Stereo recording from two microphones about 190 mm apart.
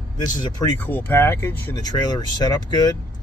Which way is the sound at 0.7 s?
10° left (ahead or behind).